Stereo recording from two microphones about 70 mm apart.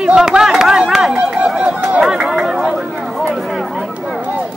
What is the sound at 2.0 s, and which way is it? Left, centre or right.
Chatter, centre.